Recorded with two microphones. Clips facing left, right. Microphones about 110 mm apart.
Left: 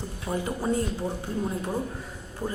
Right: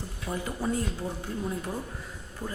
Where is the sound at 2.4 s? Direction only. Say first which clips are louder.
Left 5 dB; 30° left (ahead or behind).